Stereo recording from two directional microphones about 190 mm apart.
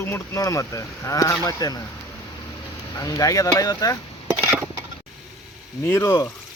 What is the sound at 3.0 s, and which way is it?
Speech, 20° left (ahead or behind).